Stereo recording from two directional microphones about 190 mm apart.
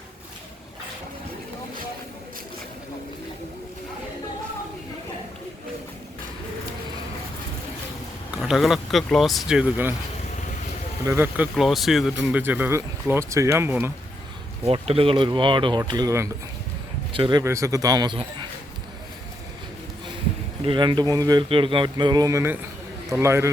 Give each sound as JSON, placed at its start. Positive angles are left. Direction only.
{"t": 8.4, "sound": "speech", "side_deg": 0}
{"t": 11.0, "sound": "speech", "side_deg": -15}
{"t": 11.5, "sound": "speech", "side_deg": 0}
{"t": 14.6, "sound": "speech", "side_deg": -30}
{"t": 20.7, "sound": "speech", "side_deg": -25}